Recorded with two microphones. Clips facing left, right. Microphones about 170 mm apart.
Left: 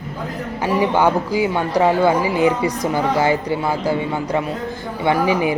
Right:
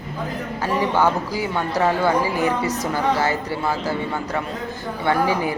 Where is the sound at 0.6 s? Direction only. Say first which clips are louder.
Left 3 dB; 15° left (ahead or behind).